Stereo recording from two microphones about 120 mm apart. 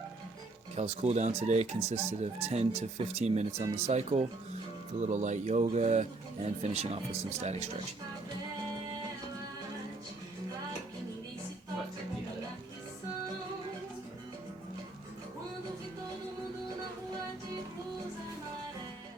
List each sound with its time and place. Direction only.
0.8 s speech: 65° right (ahead or behind)
4.9 s speech: 75° right (ahead or behind)